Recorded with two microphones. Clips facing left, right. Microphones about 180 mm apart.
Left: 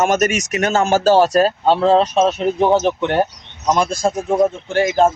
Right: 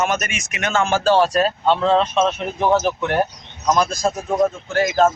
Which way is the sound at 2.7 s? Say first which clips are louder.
Left 3 dB; 25° left (ahead or behind).